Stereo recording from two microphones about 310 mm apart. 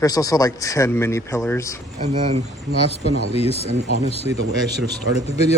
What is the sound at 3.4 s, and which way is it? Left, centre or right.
Speech, centre.